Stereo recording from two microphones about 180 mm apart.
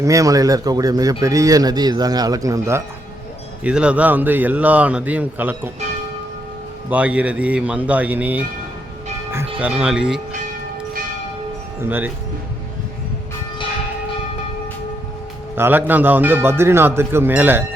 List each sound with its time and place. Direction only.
0.0 s speech: 20° right (ahead or behind)
3.6 s a man's voice: 5° right (ahead or behind)
6.9 s a man's voice: 5° right (ahead or behind)
11.8 s a man's voice: 10° right (ahead or behind)
15.5 s a man's voice: 15° right (ahead or behind)